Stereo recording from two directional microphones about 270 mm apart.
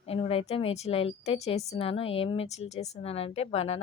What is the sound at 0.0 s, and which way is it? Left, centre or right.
A woman's voice, left.